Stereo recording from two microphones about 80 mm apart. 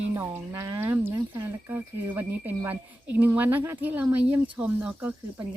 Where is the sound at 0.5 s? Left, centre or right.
Right.